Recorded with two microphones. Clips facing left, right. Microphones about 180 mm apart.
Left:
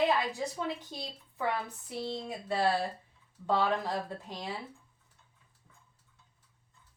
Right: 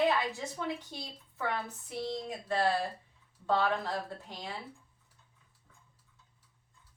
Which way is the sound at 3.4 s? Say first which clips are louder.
Left 1 dB; 15° left (ahead or behind).